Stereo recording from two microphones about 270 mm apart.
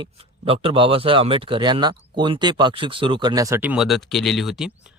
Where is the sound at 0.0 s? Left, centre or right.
Centre.